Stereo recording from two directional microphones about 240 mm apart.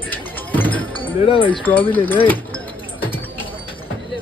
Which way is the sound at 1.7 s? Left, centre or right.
Centre.